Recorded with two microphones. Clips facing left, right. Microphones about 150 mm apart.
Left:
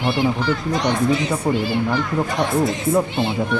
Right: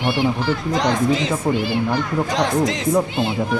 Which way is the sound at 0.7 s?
90° right.